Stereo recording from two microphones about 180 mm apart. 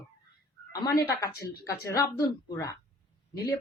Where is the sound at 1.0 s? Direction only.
20° left (ahead or behind).